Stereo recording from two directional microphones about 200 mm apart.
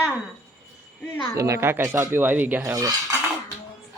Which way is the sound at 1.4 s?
15° right (ahead or behind).